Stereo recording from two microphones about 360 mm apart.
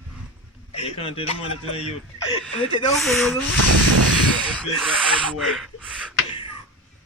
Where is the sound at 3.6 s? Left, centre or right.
Right.